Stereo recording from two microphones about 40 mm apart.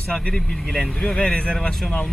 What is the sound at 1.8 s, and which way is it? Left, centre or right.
Speech, centre.